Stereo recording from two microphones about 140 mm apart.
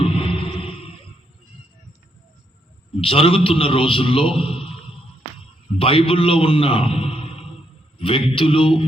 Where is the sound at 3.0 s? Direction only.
40° left (ahead or behind).